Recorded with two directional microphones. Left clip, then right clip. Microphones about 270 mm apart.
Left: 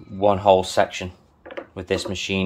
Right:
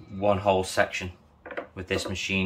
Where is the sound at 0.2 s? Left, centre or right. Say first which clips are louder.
Left 7 dB; left.